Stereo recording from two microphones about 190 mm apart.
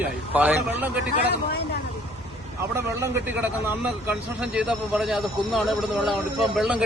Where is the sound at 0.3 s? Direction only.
10° right (ahead or behind).